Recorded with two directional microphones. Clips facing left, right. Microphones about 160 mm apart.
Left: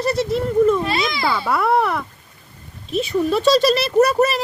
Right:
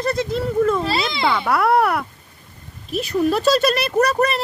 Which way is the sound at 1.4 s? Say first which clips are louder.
Right 1 dB; centre (ahead or behind).